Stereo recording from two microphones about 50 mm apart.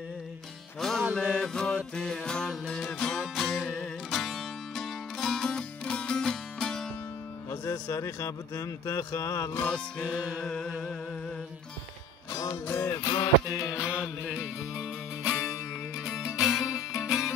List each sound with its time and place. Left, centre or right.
0.7 s music: centre
3.2 s music: centre
7.9 s speech: left
10.4 s music: centre
12.7 s music: left
13.7 s music: centre
14.2 s music: right
16.0 s music: centre